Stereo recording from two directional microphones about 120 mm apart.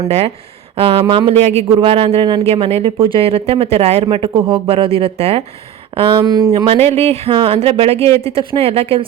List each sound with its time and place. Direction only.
0.8 s speech: 50° right (ahead or behind)
2.5 s speech: 55° right (ahead or behind)
6.2 s speech: 35° right (ahead or behind)
6.7 s speech: 55° right (ahead or behind)